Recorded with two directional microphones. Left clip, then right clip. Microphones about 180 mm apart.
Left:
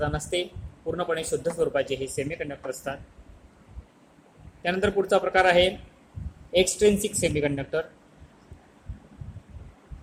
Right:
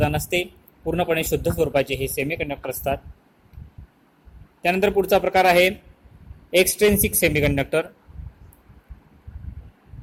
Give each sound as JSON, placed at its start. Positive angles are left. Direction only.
{"t": 0.0, "sound": "speech", "side_deg": -45}
{"t": 4.6, "sound": "speech", "side_deg": -45}